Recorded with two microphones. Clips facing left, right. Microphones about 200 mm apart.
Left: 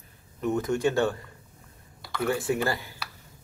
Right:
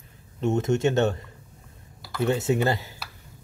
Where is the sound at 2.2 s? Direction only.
25° right (ahead or behind).